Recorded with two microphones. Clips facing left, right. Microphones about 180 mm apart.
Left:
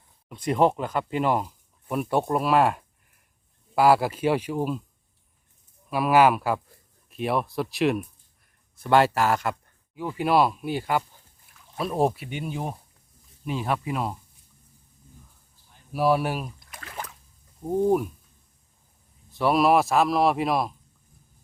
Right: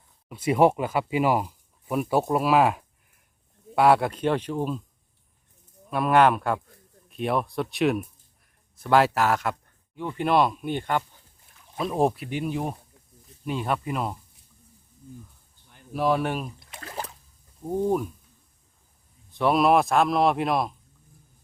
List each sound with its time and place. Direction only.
0.3 s speech: 5° right (ahead or behind)
5.9 s a man's voice: 5° left (ahead or behind)
15.9 s speech: 10° left (ahead or behind)
16.6 s a sound: 25° right (ahead or behind)
17.8 s speech: 10° left (ahead or behind)
19.3 s a man's voice: centre (ahead or behind)